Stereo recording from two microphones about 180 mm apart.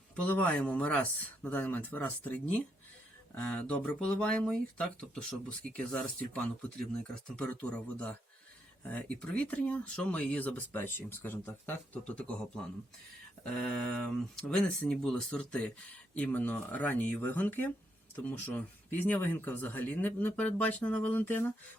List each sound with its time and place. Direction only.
0.3 s speech: 10° left (ahead or behind)
13.4 s speech: 5° left (ahead or behind)